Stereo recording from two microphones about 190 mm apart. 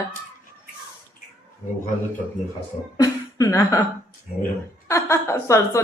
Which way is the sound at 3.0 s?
20° left (ahead or behind).